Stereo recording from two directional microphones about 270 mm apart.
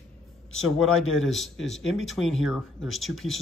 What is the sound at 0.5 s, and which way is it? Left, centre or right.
Speech, left.